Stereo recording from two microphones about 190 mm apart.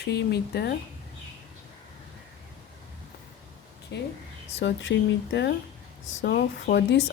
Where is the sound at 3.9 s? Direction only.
65° left (ahead or behind).